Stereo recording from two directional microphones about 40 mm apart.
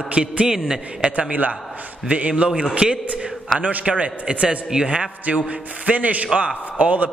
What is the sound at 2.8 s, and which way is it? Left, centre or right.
Speech, centre.